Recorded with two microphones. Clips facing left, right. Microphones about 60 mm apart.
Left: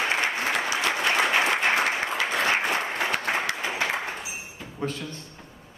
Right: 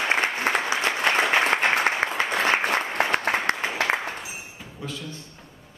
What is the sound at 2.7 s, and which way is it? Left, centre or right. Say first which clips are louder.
Applause: right 3 dB; right.